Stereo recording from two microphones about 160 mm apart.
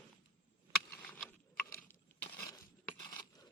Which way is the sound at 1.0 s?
10° left (ahead or behind).